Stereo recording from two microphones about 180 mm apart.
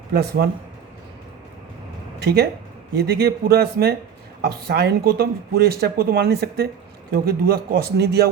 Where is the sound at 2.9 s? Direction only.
60° right (ahead or behind).